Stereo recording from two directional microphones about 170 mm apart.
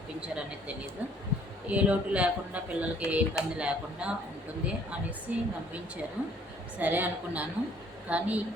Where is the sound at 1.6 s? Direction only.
10° right (ahead or behind).